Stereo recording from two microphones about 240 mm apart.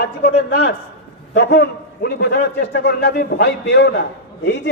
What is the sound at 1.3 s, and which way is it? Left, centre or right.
A man's voice, left.